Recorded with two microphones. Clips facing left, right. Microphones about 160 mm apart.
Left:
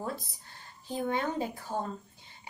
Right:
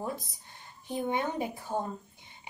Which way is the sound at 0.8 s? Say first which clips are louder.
Even; 15° right (ahead or behind).